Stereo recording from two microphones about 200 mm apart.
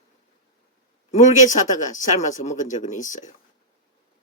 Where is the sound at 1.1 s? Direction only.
40° left (ahead or behind).